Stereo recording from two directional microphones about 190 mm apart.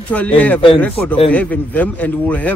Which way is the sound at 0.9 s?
30° left (ahead or behind).